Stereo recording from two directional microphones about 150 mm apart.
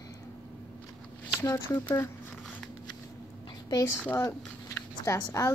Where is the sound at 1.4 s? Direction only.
15° left (ahead or behind).